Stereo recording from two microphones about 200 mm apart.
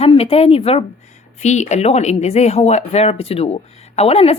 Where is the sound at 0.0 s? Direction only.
30° left (ahead or behind).